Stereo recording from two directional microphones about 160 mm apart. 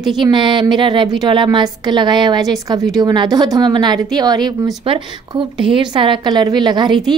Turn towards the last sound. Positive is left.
turn(degrees=-25)  # may be behind; listen again after turning